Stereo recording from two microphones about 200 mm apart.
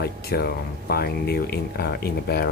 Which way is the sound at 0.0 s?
50° left (ahead or behind).